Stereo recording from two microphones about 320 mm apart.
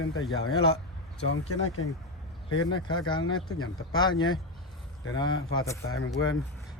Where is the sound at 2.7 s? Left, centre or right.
Centre.